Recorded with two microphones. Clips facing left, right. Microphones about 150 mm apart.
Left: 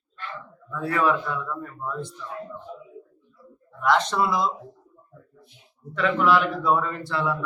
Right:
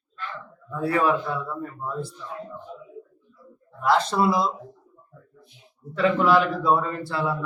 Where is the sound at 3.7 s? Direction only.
30° right (ahead or behind).